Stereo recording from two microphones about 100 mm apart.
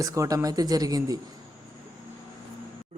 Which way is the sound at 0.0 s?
30° right (ahead or behind).